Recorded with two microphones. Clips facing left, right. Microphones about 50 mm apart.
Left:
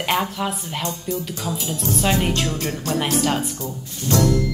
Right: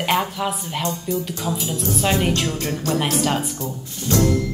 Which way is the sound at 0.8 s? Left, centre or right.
Right.